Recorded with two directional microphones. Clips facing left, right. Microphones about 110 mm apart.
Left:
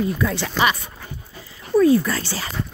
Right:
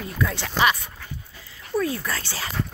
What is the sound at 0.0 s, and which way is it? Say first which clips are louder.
Speech: left 6 dB; centre (ahead or behind).